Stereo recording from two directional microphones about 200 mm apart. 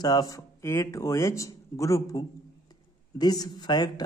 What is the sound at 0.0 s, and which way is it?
Speech, 20° left (ahead or behind).